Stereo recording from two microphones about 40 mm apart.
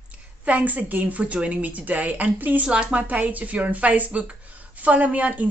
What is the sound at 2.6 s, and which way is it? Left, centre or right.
Speech, right.